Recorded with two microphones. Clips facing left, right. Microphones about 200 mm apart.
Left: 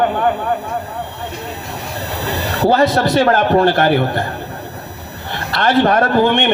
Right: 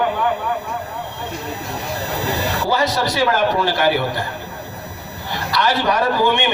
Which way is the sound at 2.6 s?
55° left (ahead or behind).